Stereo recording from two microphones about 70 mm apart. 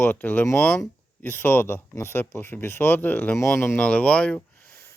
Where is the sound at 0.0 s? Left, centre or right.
Left.